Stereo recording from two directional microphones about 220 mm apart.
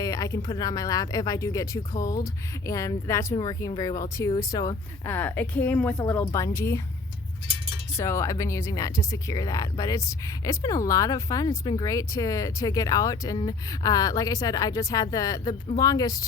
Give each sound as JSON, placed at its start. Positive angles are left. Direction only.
{"t": 0.0, "sound": "speech", "side_deg": 15}
{"t": 7.9, "sound": "speech", "side_deg": 15}